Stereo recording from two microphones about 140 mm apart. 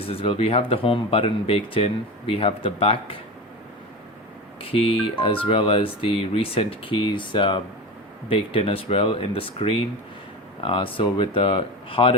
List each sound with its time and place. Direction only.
0.0 s speech: 45° left (ahead or behind)
4.6 s speech: 40° left (ahead or behind)